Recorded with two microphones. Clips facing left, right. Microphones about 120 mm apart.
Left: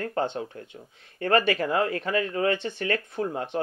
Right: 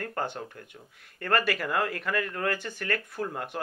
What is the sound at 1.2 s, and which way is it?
Speech, 65° left (ahead or behind).